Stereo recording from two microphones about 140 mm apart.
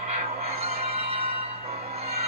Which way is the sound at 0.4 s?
45° right (ahead or behind).